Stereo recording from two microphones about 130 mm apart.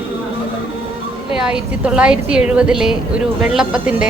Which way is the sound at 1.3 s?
5° right (ahead or behind).